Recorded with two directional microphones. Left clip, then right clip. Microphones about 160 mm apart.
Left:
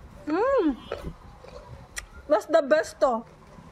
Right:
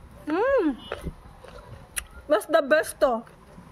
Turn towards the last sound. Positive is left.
turn(degrees=-45)  # may be behind; listen again after turning